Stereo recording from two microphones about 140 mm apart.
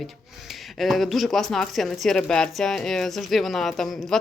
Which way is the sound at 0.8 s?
Centre (ahead or behind).